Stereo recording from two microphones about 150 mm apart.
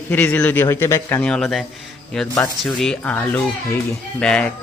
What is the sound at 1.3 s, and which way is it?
A man's voice, centre (ahead or behind).